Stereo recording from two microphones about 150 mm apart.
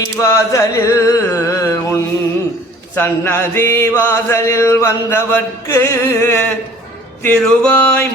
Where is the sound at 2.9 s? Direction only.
15° left (ahead or behind).